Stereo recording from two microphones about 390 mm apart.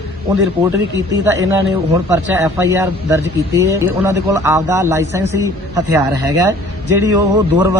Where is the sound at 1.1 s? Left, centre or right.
Centre.